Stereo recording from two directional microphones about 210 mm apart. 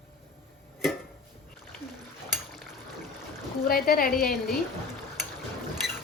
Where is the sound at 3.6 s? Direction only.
45° left (ahead or behind).